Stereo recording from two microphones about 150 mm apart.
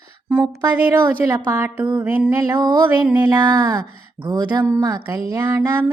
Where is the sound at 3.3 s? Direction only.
25° right (ahead or behind).